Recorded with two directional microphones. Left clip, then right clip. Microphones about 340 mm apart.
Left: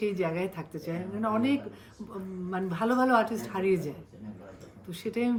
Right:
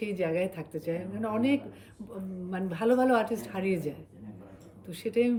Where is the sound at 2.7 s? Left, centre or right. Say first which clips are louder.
Even; centre.